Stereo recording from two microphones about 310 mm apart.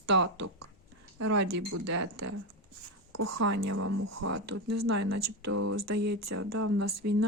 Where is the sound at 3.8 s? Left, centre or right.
Right.